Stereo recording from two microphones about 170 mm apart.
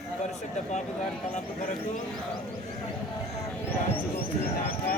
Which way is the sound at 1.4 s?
45° left (ahead or behind).